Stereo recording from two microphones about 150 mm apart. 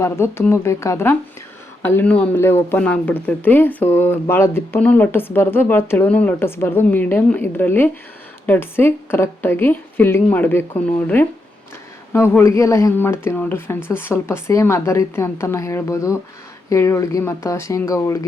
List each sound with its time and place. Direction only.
0.0 s speech: 15° left (ahead or behind)